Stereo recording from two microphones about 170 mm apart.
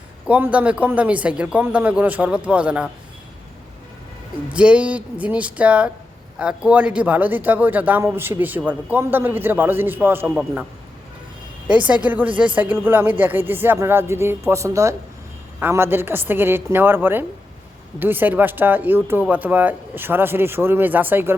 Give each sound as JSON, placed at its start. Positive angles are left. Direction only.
{"t": 0.3, "sound": "a man's voice", "side_deg": -10}
{"t": 4.5, "sound": "a man's voice", "side_deg": -5}
{"t": 11.9, "sound": "a man's voice", "side_deg": -10}